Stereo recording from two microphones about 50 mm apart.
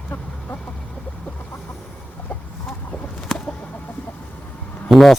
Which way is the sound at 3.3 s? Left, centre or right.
Centre.